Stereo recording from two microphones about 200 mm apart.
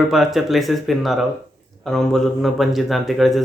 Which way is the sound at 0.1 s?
Centre (ahead or behind).